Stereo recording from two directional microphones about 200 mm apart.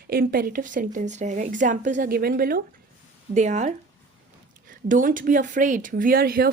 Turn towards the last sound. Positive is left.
turn(degrees=-50)  # may be behind; listen again after turning